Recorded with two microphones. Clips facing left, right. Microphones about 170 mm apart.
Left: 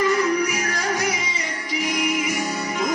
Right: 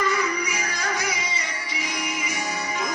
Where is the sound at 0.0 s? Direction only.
Centre (ahead or behind).